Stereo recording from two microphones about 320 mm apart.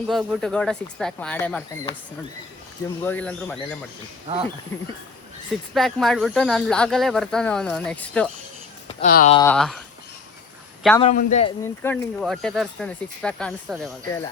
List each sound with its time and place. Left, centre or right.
0.1 s speech: centre
3.0 s speech: centre
4.3 s speech: centre
5.7 s speech: centre
8.9 s speech: left
9.4 s speech: centre
11.0 s a man's voice: left
11.6 s speech: centre